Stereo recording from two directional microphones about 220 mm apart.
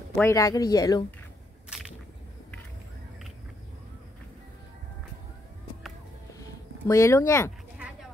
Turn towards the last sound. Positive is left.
turn(degrees=15)  # may be behind; listen again after turning